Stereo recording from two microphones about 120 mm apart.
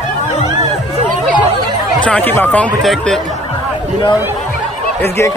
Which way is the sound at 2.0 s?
10° left (ahead or behind).